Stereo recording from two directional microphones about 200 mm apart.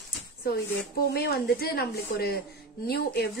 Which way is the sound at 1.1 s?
50° left (ahead or behind).